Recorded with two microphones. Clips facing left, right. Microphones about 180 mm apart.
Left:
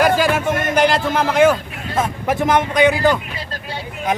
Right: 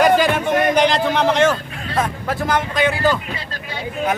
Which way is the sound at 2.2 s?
20° left (ahead or behind).